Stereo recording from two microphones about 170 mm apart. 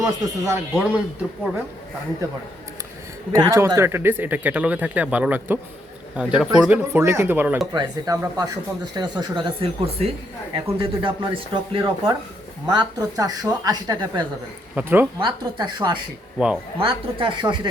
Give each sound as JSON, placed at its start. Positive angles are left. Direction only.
{"t": 0.0, "sound": "speech", "side_deg": -20}
{"t": 3.3, "sound": "speech", "side_deg": -15}
{"t": 14.8, "sound": "speech", "side_deg": -10}
{"t": 15.2, "sound": "speech", "side_deg": -25}
{"t": 16.4, "sound": "speech", "side_deg": -5}
{"t": 16.8, "sound": "speech", "side_deg": -30}